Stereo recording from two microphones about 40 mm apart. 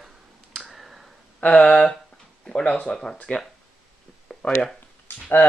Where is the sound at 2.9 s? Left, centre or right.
Centre.